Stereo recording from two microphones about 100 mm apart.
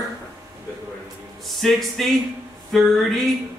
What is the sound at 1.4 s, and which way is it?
Speech, centre (ahead or behind).